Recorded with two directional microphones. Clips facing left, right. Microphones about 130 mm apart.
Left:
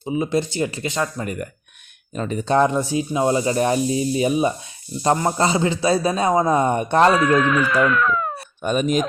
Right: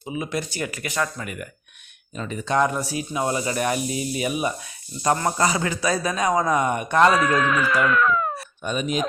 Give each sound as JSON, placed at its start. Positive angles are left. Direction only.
{"t": 0.0, "sound": "speech", "side_deg": 25}
{"t": 1.2, "sound": "speech", "side_deg": 35}
{"t": 7.1, "sound": "speech", "side_deg": 0}
{"t": 8.6, "sound": "speech", "side_deg": 45}